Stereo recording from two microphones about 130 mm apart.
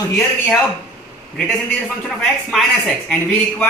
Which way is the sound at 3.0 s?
10° left (ahead or behind).